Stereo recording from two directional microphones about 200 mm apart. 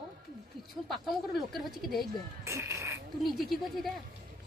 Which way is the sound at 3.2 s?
Centre (ahead or behind).